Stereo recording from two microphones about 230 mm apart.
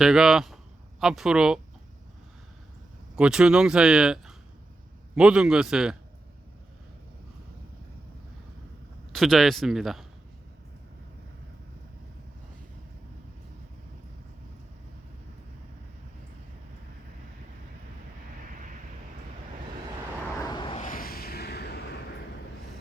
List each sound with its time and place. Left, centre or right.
0.0 s speech: centre
3.2 s speech: centre
9.1 s speech: centre
20.4 s vehicle: centre
20.8 s a sound: left